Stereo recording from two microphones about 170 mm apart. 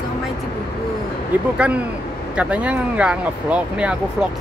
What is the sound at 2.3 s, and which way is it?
Speech, 5° right (ahead or behind).